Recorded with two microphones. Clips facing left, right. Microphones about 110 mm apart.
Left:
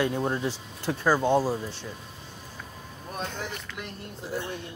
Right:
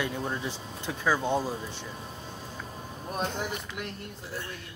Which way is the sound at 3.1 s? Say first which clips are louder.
Right 3 dB; 25° right (ahead or behind).